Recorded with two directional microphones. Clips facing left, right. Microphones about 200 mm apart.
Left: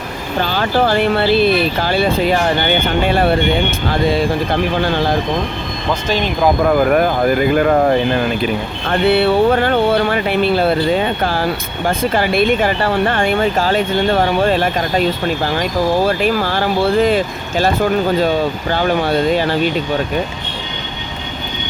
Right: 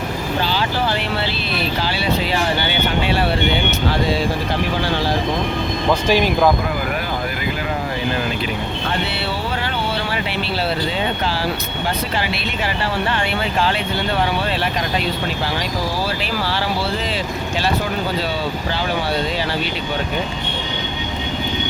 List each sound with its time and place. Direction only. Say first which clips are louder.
0.4 s speech: left 8 dB; 50° left (ahead or behind)
5.9 s speech: right 1 dB; 10° right (ahead or behind)
6.7 s speech: left 10 dB; 50° left (ahead or behind)
16.0 s speech: left 7 dB; 50° left (ahead or behind)